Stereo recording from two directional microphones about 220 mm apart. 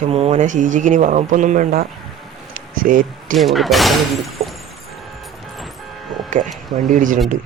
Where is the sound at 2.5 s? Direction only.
40° right (ahead or behind).